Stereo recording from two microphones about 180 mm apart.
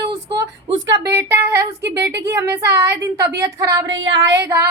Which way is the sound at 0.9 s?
15° right (ahead or behind).